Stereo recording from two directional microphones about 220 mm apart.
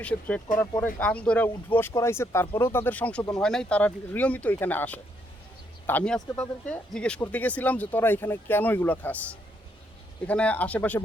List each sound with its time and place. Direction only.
0.0 s speech: 5° left (ahead or behind)